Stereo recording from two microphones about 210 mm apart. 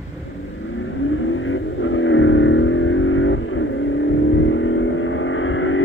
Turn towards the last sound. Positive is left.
turn(degrees=70)  # may be behind; listen again after turning